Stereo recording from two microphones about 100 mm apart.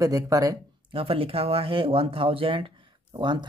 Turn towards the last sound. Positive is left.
turn(degrees=-50)  # may be behind; listen again after turning